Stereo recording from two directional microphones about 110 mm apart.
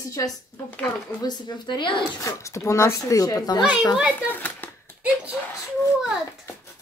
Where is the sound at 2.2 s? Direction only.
25° left (ahead or behind).